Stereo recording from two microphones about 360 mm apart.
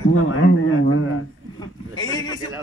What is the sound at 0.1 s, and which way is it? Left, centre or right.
Speech, left.